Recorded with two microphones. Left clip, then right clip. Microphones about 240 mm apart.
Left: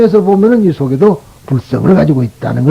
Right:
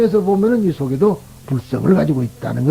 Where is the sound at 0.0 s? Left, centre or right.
Left.